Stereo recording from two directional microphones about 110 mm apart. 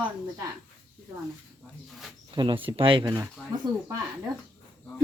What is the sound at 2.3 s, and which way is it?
Speech, 45° right (ahead or behind).